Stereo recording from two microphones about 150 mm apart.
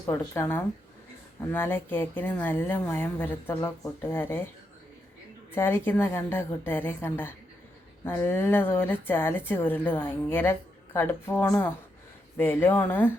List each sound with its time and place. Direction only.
0.0 s a woman's voice: 20° left (ahead or behind)
5.5 s a woman's voice: 15° left (ahead or behind)